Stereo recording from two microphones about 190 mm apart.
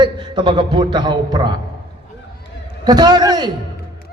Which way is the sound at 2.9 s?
20° right (ahead or behind).